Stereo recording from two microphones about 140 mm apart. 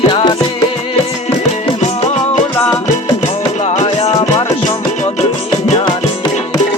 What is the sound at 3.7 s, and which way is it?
Music, 50° left (ahead or behind).